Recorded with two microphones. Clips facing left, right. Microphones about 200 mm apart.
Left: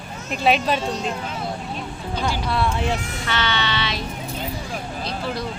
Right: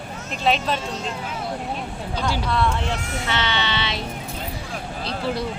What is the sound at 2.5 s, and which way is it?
Speech, 10° left (ahead or behind).